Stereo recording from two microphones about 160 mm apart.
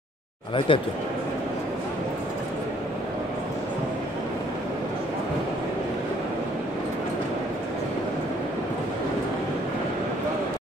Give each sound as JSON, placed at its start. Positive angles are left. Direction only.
{"t": 0.7, "sound": "speech", "side_deg": 35}